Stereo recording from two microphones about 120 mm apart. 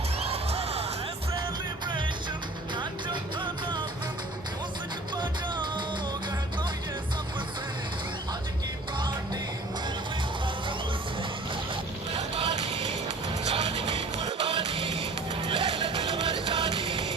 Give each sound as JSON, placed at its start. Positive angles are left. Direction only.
{"t": 0.3, "sound": "music", "side_deg": -60}
{"t": 2.7, "sound": "music", "side_deg": -40}
{"t": 5.1, "sound": "music", "side_deg": -40}
{"t": 9.0, "sound": "music", "side_deg": -40}
{"t": 12.1, "sound": "vehicle", "side_deg": -55}
{"t": 13.5, "sound": "music", "side_deg": -60}